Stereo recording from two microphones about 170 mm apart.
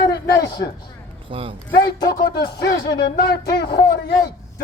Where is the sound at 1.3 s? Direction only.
30° right (ahead or behind).